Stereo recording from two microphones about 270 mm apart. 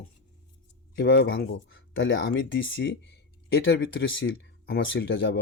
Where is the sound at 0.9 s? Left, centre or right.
Left.